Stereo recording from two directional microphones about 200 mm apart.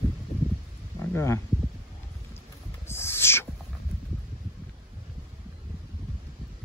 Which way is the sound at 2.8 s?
10° left (ahead or behind).